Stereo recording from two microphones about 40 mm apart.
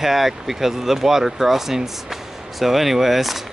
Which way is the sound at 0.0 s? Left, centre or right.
Centre.